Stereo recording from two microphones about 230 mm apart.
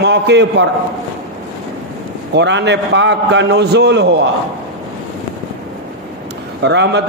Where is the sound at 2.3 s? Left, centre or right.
Right.